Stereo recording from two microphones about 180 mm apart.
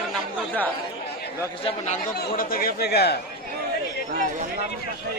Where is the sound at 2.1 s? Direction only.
55° left (ahead or behind).